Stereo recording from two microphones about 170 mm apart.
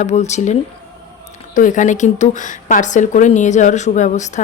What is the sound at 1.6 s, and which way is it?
Speech, 50° left (ahead or behind).